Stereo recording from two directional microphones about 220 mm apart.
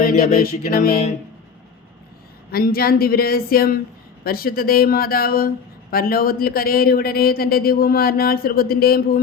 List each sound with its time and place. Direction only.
0.0 s music: 35° left (ahead or behind)
2.5 s a man's voice: 45° left (ahead or behind)